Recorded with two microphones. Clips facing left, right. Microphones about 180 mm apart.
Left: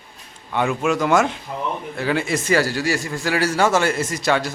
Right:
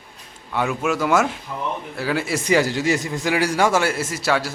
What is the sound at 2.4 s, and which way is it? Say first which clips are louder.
A man's voice: right 1 dB; 15° right (ahead or behind).